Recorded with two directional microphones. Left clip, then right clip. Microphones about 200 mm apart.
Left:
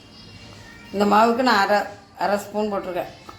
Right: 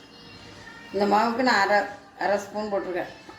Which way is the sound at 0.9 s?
50° left (ahead or behind).